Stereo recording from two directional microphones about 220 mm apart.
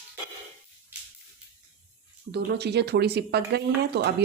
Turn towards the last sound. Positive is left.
turn(degrees=-50)  # may be behind; listen again after turning